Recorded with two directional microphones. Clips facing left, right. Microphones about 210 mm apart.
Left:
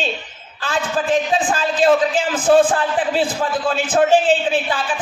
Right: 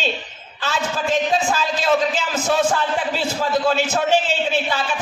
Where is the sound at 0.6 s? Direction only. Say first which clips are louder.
Left 2 dB; 50° left (ahead or behind).